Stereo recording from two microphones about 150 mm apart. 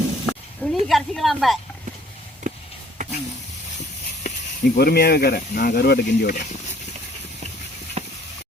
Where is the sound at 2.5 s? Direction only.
55° right (ahead or behind).